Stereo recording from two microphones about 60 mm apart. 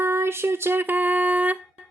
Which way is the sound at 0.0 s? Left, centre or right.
Right.